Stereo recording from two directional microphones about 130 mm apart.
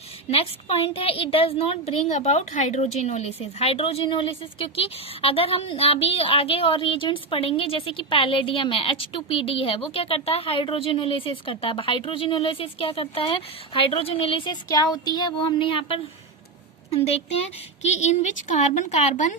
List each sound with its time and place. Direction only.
0.3 s a woman's voice: 50° left (ahead or behind); by 14.8 s 30° left (ahead or behind)
14.9 s a sound: 35° left (ahead or behind)
16.9 s a woman's voice: 50° left (ahead or behind)
17.8 s a woman's voice: 60° left (ahead or behind)